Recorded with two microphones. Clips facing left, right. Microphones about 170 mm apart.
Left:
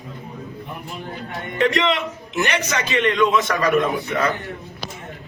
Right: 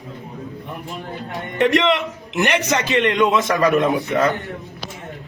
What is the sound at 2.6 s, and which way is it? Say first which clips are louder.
A man's voice: right 3 dB; 20° right (ahead or behind).